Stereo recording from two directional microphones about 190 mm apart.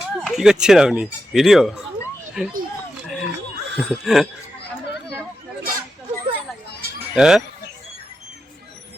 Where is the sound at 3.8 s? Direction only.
Centre (ahead or behind).